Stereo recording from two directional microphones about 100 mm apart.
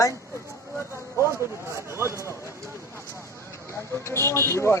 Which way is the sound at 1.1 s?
30° right (ahead or behind).